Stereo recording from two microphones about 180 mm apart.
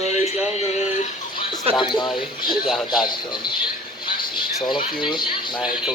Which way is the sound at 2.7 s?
Centre (ahead or behind).